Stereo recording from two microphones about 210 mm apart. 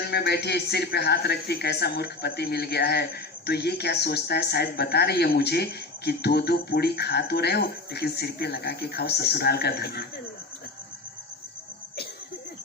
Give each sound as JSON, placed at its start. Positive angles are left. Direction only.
{"t": 0.1, "sound": "speech", "side_deg": 50}